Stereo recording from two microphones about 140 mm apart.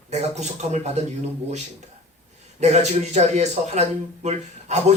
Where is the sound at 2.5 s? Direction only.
55° right (ahead or behind).